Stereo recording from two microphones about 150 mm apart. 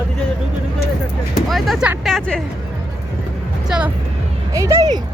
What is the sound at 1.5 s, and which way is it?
Vehicle, centre (ahead or behind).